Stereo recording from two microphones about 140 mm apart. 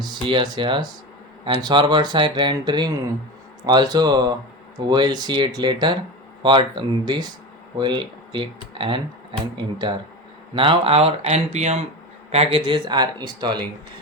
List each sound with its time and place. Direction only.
0.0 s speech: 35° right (ahead or behind)